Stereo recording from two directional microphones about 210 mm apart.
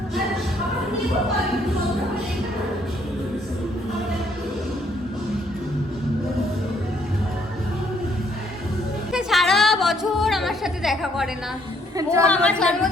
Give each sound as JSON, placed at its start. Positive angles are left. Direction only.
{"t": 9.1, "sound": "music", "side_deg": 0}
{"t": 11.9, "sound": "a woman's voice", "side_deg": -15}
{"t": 12.3, "sound": "a woman's voice", "side_deg": 5}